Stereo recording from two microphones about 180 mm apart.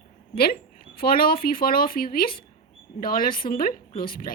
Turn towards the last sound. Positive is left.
turn(degrees=55)  # may be behind; listen again after turning